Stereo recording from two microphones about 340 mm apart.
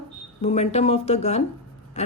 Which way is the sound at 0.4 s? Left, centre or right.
Centre.